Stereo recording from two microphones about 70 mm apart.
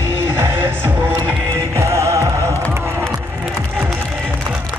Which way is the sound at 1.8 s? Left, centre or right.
Right.